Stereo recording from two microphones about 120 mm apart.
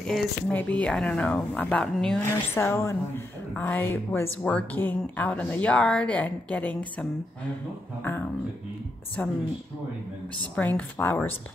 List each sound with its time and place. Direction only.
0.0 s speech: 10° left (ahead or behind)
2.2 s speech: 20° left (ahead or behind)
9.2 s speech: 10° left (ahead or behind)
10.5 s speech: 15° left (ahead or behind)